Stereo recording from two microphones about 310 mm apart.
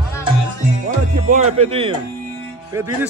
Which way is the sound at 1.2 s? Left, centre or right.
Centre.